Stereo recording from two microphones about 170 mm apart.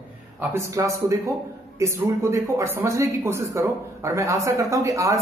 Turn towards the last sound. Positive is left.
turn(degrees=-20)  # may be behind; listen again after turning